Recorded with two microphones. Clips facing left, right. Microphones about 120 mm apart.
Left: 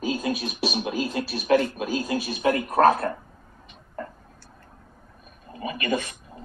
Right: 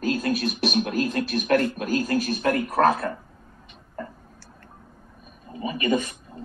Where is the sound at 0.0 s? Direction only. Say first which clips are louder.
Right 2 dB; 10° left (ahead or behind).